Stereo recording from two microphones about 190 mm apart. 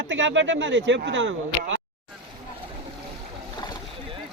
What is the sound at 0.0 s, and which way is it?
Speech, 80° right.